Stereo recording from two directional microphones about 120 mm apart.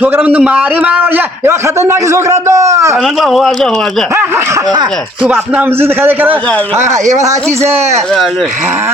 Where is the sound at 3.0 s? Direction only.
Centre (ahead or behind).